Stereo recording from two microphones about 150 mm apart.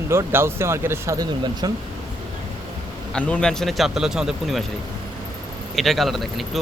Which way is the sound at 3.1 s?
5° left (ahead or behind).